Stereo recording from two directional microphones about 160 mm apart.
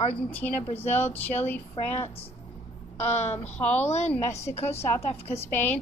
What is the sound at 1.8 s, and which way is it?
Speech, 35° left (ahead or behind).